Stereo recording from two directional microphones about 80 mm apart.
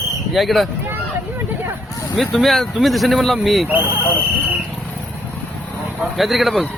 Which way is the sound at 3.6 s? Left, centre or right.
Right.